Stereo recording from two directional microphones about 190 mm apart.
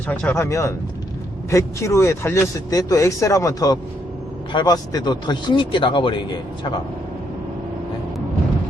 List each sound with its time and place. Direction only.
0.1 s speech: 10° left (ahead or behind); by 6.4 s 25° left (ahead or behind)